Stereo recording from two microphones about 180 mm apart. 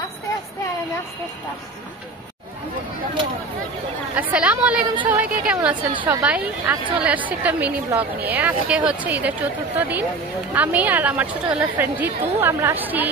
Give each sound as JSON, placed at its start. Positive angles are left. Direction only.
{"t": 4.1, "sound": "a woman's voice", "side_deg": -5}